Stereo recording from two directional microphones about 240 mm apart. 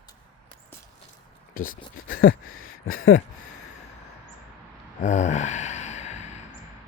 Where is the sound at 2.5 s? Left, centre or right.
Left.